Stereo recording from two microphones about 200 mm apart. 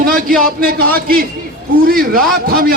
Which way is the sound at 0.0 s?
45° right (ahead or behind).